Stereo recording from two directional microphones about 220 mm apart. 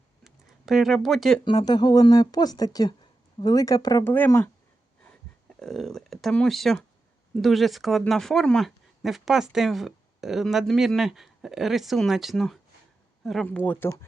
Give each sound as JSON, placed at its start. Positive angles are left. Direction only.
{"t": 0.3, "sound": "a sound", "side_deg": 0}
{"t": 1.5, "sound": "speech", "side_deg": 20}
{"t": 5.5, "sound": "speech", "side_deg": 0}